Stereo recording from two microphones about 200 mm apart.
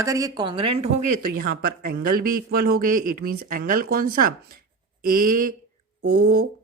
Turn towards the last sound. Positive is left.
turn(degrees=-55)  # may be behind; listen again after turning